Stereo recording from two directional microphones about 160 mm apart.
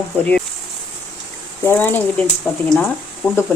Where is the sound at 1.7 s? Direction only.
10° left (ahead or behind).